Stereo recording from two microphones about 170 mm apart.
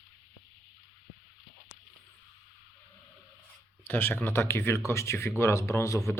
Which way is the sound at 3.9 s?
10° left (ahead or behind).